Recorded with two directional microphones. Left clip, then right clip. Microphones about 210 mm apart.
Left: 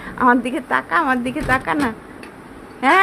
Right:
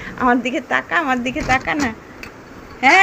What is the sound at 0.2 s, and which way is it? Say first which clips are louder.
A woman's voice: left 1 dB; 5° left (ahead or behind).